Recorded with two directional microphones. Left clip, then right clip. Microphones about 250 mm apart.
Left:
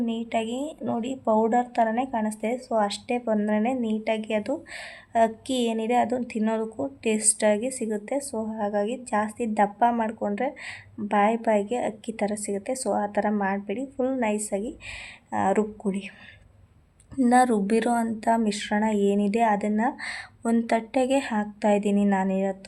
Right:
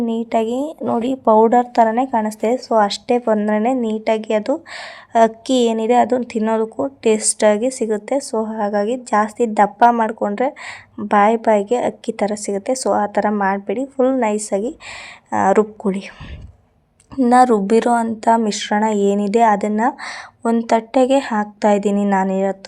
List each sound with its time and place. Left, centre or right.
0.0 s a woman's voice: right
17.2 s a woman's voice: centre